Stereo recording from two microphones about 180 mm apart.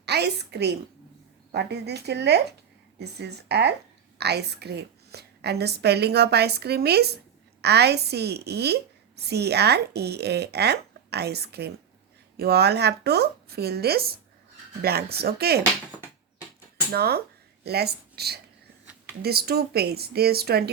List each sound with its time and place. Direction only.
0.0 s a woman's voice: 65° right (ahead or behind)
16.9 s a woman's voice: 60° right (ahead or behind)